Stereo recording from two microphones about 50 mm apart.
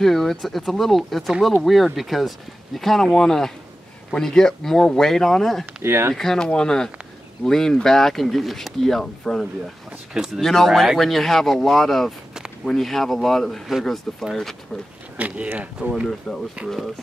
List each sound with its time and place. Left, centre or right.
0.0 s speech: centre
5.8 s speech: right
6.1 s speech: centre
10.1 s speech: centre
10.4 s speech: centre
15.1 s speech: right
16.3 s speech: centre
16.6 s speech: centre